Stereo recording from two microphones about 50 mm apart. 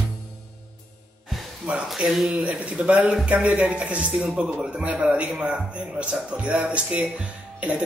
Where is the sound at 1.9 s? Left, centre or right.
Centre.